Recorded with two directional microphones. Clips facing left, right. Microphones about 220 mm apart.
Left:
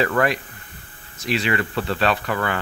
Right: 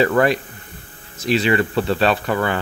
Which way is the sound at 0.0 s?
30° right (ahead or behind).